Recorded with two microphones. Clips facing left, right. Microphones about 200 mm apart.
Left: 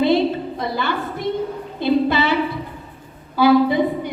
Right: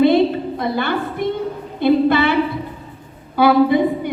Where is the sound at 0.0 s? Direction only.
55° right (ahead or behind).